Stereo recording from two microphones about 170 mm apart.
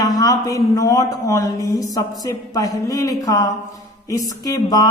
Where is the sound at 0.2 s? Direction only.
20° left (ahead or behind).